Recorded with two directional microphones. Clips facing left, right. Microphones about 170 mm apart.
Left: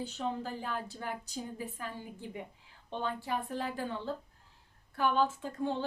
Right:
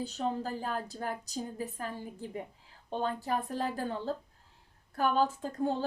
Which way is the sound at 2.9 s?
40° right (ahead or behind).